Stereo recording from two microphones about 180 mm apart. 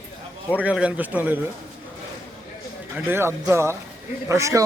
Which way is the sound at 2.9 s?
15° right (ahead or behind).